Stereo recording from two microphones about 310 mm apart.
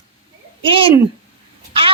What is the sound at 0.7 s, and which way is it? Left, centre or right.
Speech, centre.